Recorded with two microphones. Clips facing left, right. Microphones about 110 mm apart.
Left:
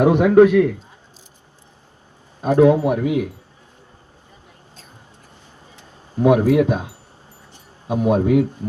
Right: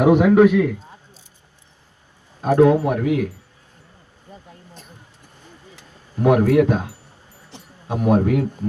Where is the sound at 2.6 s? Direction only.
20° left (ahead or behind).